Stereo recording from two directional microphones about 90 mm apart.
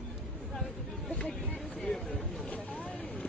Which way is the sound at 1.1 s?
10° left (ahead or behind).